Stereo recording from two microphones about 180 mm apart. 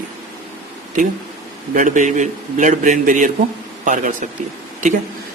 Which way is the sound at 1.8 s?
45° right (ahead or behind).